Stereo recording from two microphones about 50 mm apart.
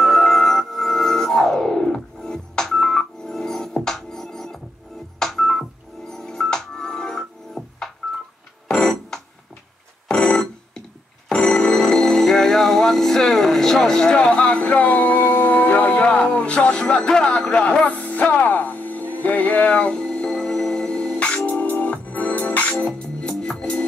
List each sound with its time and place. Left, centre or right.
0.0 s music: centre
5.2 s telephone dialing: centre
8.6 s music: centre
10.0 s telephone bell ringing: centre
11.2 s music: centre
21.5 s music: left